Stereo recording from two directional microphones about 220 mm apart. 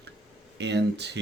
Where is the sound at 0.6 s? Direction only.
50° right (ahead or behind).